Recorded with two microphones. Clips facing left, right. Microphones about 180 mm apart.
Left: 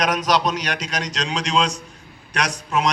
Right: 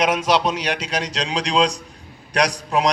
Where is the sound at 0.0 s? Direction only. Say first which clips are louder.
Right 2 dB; 25° right (ahead or behind).